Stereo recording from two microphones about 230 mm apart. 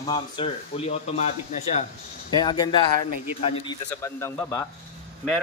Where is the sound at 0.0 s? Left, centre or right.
Left.